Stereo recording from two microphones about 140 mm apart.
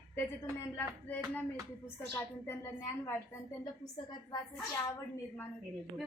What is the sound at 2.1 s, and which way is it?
A woman's voice, 15° left (ahead or behind).